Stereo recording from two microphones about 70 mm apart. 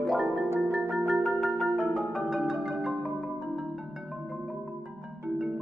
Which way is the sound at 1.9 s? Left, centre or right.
Centre.